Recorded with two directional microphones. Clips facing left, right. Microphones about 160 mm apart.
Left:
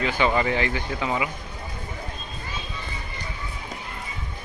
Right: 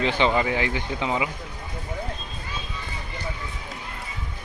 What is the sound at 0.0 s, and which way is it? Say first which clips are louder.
Speech: right 1 dB; 30° right (ahead or behind).